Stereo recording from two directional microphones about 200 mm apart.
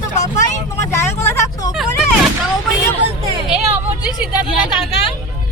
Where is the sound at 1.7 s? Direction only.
Centre (ahead or behind).